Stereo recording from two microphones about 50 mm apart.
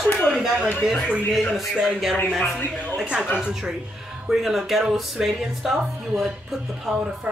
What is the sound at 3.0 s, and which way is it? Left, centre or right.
Speech, right.